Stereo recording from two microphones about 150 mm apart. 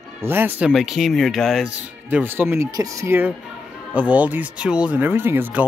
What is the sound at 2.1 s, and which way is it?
Speech, 15° right (ahead or behind).